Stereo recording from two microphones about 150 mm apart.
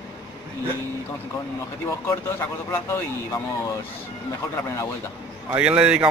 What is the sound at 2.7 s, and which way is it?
Speech, 15° left (ahead or behind).